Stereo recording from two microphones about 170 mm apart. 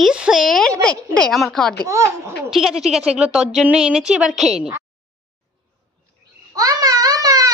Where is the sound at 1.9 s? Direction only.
15° right (ahead or behind).